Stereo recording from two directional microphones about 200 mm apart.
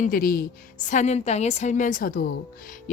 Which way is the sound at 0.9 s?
35° left (ahead or behind).